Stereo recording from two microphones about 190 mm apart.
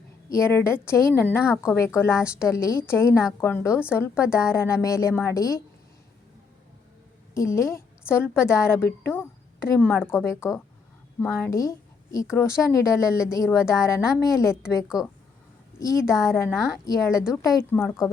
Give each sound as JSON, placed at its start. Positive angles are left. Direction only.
{"t": 0.3, "sound": "a woman's voice", "side_deg": 15}
{"t": 7.3, "sound": "a woman's voice", "side_deg": 15}
{"t": 15.8, "sound": "a woman's voice", "side_deg": 15}